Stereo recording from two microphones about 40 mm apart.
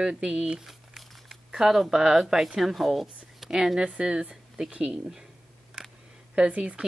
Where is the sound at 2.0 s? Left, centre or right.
Centre.